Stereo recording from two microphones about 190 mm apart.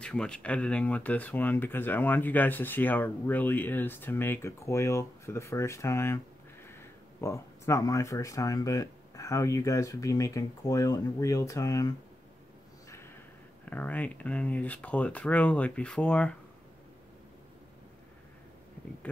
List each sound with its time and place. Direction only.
0.0 s speech: 5° left (ahead or behind)
13.7 s speech: 10° left (ahead or behind)